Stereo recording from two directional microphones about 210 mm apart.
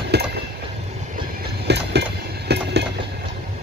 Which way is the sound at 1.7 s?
55° right (ahead or behind).